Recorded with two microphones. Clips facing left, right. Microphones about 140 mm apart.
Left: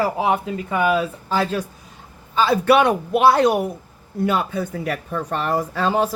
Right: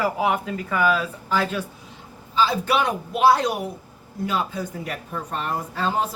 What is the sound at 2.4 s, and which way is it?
Speech, 60° left (ahead or behind).